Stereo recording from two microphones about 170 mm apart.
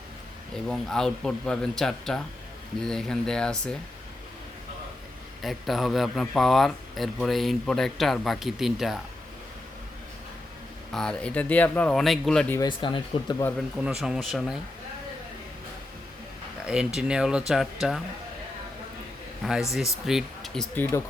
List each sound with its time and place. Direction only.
0.5 s a man's voice: 5° left (ahead or behind)
5.4 s a man's voice: centre (ahead or behind)
10.9 s a man's voice: 5° left (ahead or behind)
12.5 s speech: 30° left (ahead or behind)
13.8 s a man's voice: 5° right (ahead or behind)
16.6 s a man's voice: 5° right (ahead or behind)
19.7 s a man's voice: centre (ahead or behind)